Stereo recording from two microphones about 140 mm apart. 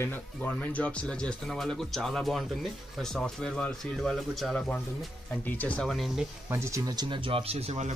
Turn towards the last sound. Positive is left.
turn(degrees=-50)  # may be behind; listen again after turning